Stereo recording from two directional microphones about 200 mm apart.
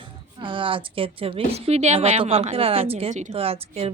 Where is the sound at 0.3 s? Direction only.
25° right (ahead or behind).